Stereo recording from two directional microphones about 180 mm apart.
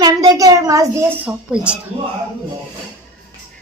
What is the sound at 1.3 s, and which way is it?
Speech, 5° right (ahead or behind).